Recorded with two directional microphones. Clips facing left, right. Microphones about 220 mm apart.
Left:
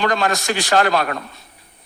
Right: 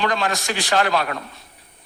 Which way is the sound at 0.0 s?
45° left (ahead or behind).